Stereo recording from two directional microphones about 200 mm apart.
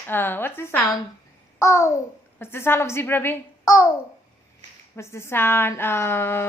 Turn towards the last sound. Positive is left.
turn(degrees=10)  # may be behind; listen again after turning